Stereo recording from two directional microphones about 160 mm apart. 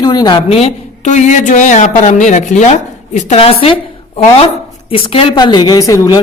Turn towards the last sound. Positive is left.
turn(degrees=20)  # may be behind; listen again after turning